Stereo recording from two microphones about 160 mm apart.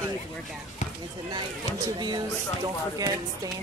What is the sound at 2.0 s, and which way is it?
Speech, 25° right (ahead or behind).